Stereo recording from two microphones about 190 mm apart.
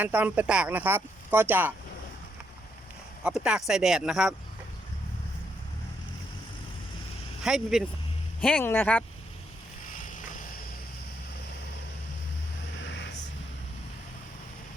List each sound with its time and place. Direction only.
0.0 s speech: 10° right (ahead or behind)
3.2 s speech: 5° right (ahead or behind)
7.4 s speech: centre (ahead or behind)
9.9 s vehicle: 45° left (ahead or behind)